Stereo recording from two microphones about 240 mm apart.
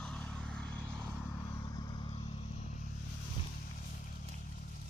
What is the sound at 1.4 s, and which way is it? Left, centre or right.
Vehicle, centre.